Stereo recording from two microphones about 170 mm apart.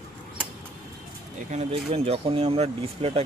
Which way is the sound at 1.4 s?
40° right (ahead or behind).